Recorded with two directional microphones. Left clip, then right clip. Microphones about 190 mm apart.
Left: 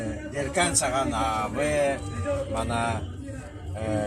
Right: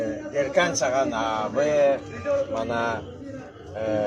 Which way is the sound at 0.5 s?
15° right (ahead or behind).